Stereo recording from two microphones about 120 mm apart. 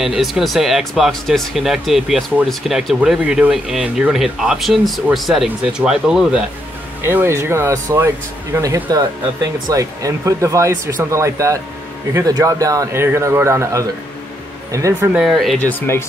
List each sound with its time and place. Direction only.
0.0 s speech: 5° right (ahead or behind)
7.0 s speech: 20° right (ahead or behind)
15.1 s speech: centre (ahead or behind)
15.9 s speech: 20° left (ahead or behind)